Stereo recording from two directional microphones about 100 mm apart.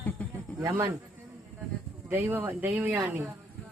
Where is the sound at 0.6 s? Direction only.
35° right (ahead or behind).